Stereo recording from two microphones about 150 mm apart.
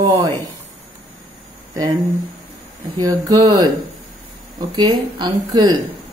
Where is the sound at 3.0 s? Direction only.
25° right (ahead or behind).